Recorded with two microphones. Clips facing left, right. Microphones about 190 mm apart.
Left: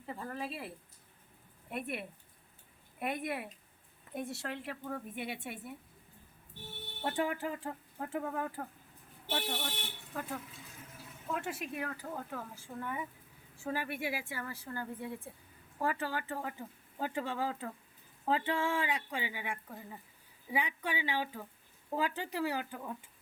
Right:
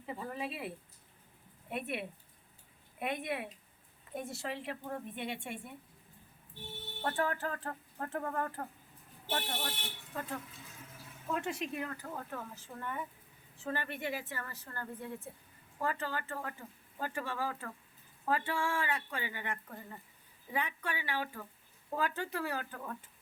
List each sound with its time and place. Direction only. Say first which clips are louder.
0.0 s speech: right 1 dB; 5° right (ahead or behind)
1.7 s a woman's voice: right 1 dB; centre (ahead or behind)
7.0 s speech: even; 15° left (ahead or behind)
10.2 s a woman's voice: even; 5° left (ahead or behind)